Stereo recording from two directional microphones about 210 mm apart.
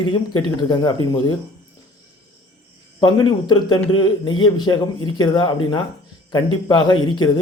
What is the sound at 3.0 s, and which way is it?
A man's voice, 20° left (ahead or behind).